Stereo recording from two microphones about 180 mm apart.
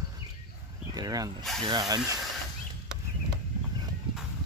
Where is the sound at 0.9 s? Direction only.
20° right (ahead or behind).